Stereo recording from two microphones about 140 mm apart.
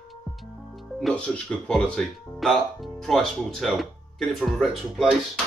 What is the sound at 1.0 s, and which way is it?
Speech, 10° left (ahead or behind).